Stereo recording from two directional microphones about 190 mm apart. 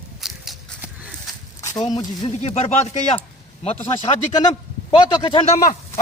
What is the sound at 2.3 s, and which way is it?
Speech, 35° left (ahead or behind).